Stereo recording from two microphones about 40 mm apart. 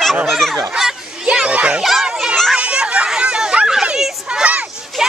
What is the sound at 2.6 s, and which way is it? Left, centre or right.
Chatter, right.